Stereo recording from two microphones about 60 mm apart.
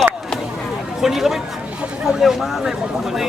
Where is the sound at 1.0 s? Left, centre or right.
Centre.